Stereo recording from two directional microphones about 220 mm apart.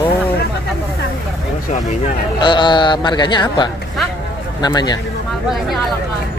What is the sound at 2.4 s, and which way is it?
Speech, 20° left (ahead or behind).